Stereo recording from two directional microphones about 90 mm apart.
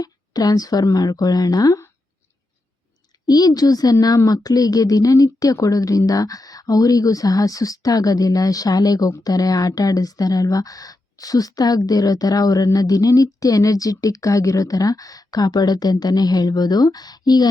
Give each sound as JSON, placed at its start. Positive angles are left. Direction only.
{"t": 0.0, "sound": "speech", "side_deg": 45}
{"t": 3.2, "sound": "speech", "side_deg": 45}